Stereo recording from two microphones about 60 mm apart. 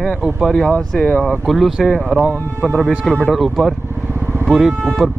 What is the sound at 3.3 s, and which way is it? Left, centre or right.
Speech, centre.